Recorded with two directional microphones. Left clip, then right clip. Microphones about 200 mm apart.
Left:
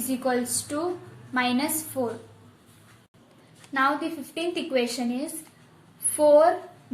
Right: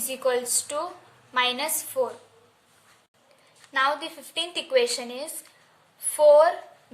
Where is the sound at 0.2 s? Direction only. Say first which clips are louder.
Right 3 dB; 55° right (ahead or behind).